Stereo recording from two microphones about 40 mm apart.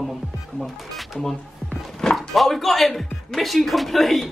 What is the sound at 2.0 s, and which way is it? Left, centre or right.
Music, centre.